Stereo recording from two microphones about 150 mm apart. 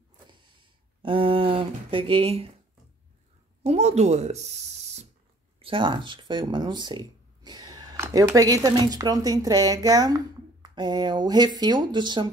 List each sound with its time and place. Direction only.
1.0 s speech: 40° right (ahead or behind)
3.6 s speech: 45° right (ahead or behind)
5.6 s speech: 35° right (ahead or behind)